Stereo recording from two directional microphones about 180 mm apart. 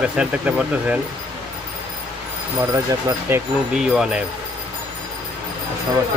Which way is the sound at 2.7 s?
15° right (ahead or behind).